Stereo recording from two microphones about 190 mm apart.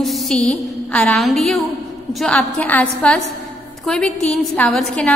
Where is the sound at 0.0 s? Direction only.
Centre (ahead or behind).